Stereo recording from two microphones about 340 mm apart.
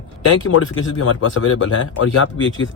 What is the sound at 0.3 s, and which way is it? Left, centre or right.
Speech, left.